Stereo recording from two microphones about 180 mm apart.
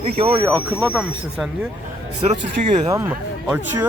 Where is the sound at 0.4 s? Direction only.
10° right (ahead or behind).